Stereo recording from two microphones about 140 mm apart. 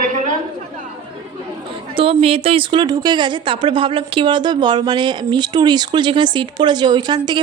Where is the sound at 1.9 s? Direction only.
40° right (ahead or behind).